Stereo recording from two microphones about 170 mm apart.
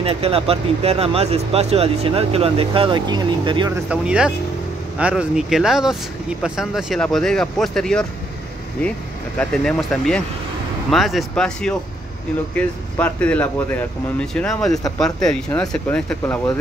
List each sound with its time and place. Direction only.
0.0 s speech: 35° right (ahead or behind)
3.9 s speech: 5° right (ahead or behind)
9.4 s speech: 5° left (ahead or behind)